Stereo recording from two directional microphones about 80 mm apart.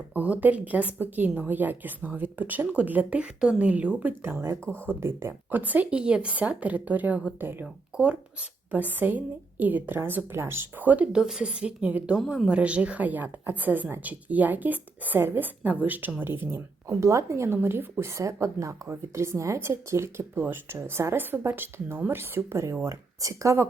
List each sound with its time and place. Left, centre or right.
0.1 s a woman's voice: right
18.0 s speech: right